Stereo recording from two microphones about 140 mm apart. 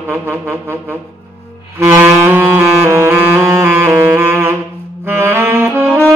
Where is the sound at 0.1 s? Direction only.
15° right (ahead or behind).